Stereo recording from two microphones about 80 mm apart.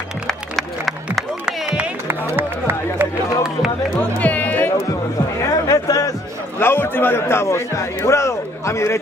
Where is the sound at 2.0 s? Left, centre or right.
Right.